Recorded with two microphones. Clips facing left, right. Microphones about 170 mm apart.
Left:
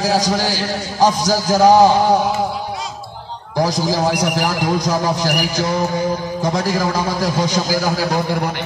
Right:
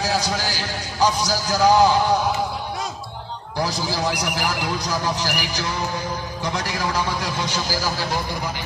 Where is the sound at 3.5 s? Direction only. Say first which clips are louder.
Left 7 dB; 40° left (ahead or behind).